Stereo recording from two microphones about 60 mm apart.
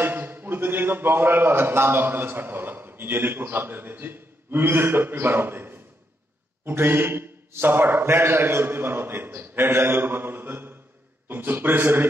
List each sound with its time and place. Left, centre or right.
0.0 s a man's voice: right